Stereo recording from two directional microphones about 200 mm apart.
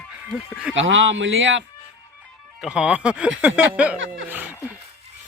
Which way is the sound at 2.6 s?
5° right (ahead or behind).